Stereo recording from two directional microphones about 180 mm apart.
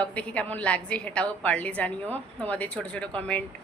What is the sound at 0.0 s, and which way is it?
A woman's voice, 5° left (ahead or behind).